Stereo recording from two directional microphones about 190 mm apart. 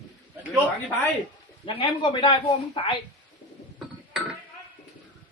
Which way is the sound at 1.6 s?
25° left (ahead or behind).